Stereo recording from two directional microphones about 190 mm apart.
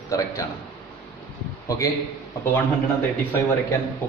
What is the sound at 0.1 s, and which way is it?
Speech, 15° left (ahead or behind).